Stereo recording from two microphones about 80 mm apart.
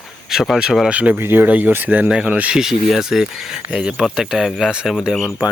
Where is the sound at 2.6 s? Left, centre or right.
Centre.